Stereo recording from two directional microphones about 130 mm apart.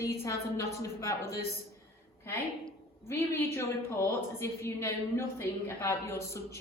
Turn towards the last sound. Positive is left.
turn(degrees=20)  # may be behind; listen again after turning